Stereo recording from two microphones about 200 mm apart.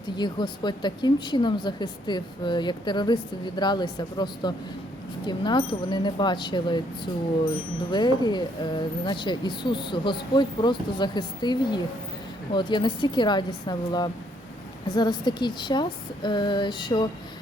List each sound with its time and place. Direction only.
0.2 s a woman's voice: 20° left (ahead or behind)